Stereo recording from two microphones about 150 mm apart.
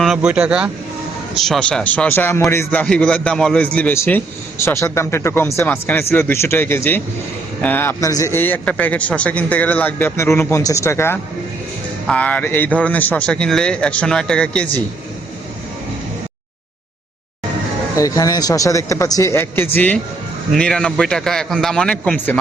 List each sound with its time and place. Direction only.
0.0 s speech: 5° right (ahead or behind)
1.4 s a man's voice: 5° left (ahead or behind)
17.9 s a man's voice: 20° left (ahead or behind)